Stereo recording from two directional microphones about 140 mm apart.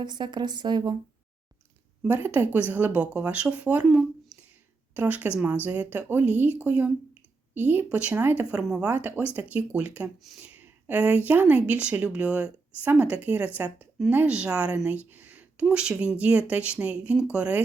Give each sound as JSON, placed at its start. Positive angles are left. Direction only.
{"t": 0.0, "sound": "a woman's voice", "side_deg": -30}
{"t": 2.0, "sound": "speech", "side_deg": -15}